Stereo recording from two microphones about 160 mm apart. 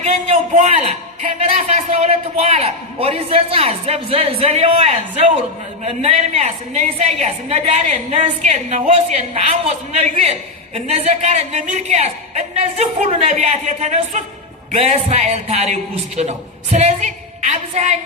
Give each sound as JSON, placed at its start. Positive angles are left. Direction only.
{"t": 0.7, "sound": "a man's voice", "side_deg": -40}